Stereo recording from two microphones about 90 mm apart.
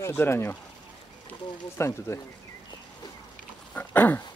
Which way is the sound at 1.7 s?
30° left (ahead or behind).